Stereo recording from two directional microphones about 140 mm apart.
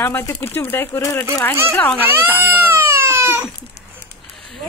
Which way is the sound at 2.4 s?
15° right (ahead or behind).